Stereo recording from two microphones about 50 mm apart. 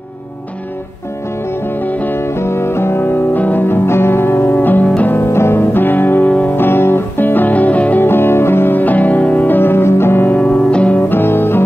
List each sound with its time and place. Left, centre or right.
1.7 s music: left
2.1 s music: left
3.3 s music: left
3.6 s music: left
4.8 s music: left
5.1 s music: left
8.0 s music: left
9.6 s music: left
10.3 s music: left
11.0 s music: left